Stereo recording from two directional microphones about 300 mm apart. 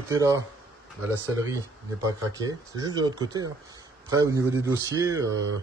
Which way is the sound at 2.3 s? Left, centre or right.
Centre.